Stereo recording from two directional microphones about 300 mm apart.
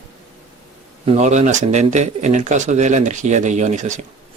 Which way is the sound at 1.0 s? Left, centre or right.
Right.